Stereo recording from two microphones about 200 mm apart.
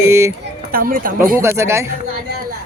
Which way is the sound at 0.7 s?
45° right (ahead or behind).